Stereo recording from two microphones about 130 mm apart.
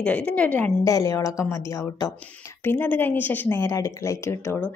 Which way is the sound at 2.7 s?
15° left (ahead or behind).